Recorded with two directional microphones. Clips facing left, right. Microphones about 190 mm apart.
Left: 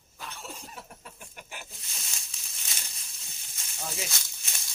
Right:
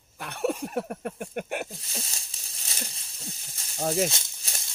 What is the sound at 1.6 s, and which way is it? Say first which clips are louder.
Snake: right 9 dB; 35° right (ahead or behind).